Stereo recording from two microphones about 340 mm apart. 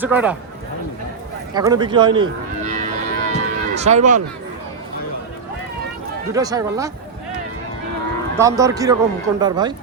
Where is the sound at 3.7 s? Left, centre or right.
Centre.